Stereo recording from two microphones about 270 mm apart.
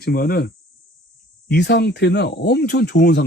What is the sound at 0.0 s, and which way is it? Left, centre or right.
Speech, left.